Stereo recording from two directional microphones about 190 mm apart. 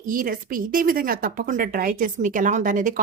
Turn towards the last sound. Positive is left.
turn(degrees=-45)  # may be behind; listen again after turning